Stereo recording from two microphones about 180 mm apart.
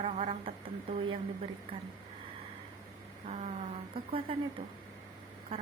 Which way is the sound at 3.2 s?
35° right (ahead or behind).